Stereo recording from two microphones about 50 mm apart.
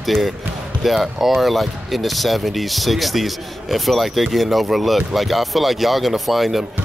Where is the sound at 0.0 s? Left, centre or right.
Centre.